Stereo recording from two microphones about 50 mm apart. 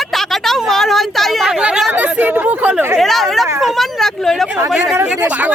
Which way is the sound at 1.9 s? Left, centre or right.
Right.